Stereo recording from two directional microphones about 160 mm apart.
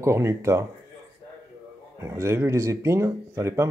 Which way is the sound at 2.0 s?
15° right (ahead or behind).